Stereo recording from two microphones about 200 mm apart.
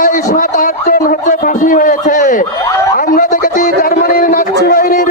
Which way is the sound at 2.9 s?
45° left (ahead or behind).